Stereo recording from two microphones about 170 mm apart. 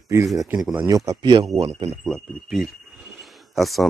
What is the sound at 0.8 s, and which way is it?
Speech, 20° right (ahead or behind).